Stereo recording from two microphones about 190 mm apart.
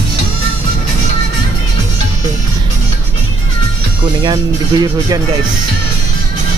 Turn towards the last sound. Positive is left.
turn(degrees=-20)  # may be behind; listen again after turning